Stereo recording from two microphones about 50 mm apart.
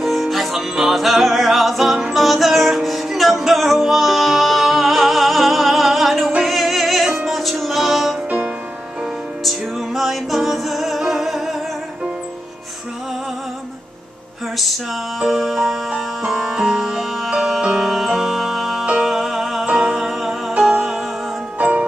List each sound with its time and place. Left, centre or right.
0.0 s music: centre
9.4 s music: centre
14.6 s music: centre
19.6 s music: centre
20.0 s music: centre
21.5 s music: right